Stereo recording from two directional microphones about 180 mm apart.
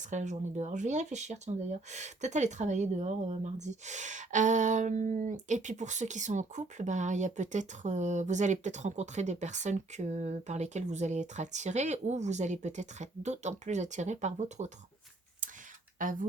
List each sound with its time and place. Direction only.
0.0 s speech: 40° right (ahead or behind)
16.0 s speech: 50° right (ahead or behind)